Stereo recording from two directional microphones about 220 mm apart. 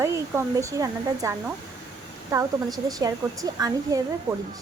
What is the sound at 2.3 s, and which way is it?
A woman's voice, 15° right (ahead or behind).